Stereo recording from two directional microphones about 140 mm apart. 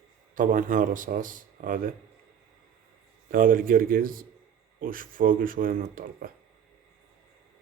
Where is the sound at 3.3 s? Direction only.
90° right.